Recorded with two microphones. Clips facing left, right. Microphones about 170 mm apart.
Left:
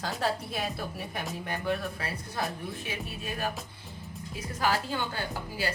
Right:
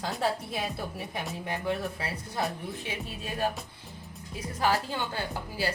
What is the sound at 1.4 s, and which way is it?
Speech, 20° right (ahead or behind).